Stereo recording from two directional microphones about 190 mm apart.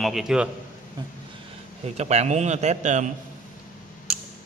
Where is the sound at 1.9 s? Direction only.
35° right (ahead or behind).